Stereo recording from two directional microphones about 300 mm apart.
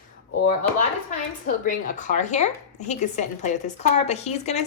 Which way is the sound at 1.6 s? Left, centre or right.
Left.